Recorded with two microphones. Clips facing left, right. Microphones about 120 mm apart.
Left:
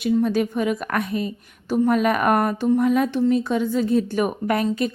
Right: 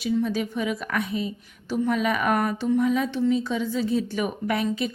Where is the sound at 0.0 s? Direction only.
50° left (ahead or behind).